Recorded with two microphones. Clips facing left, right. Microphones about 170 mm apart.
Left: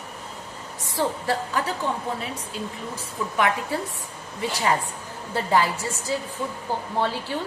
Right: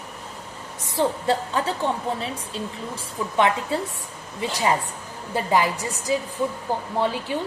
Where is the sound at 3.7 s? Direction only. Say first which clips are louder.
Right 2 dB; 25° right (ahead or behind).